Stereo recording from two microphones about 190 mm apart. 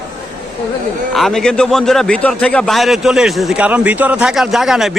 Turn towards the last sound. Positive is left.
turn(degrees=0)  # may be behind; listen again after turning